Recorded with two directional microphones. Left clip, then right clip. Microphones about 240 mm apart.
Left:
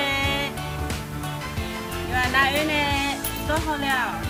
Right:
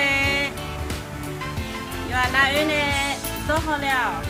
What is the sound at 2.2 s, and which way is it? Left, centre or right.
Speech, centre.